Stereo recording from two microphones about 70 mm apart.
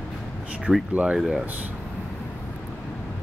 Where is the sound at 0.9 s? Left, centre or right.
Centre.